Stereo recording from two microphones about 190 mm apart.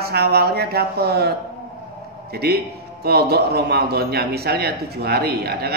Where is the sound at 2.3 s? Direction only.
55° right (ahead or behind).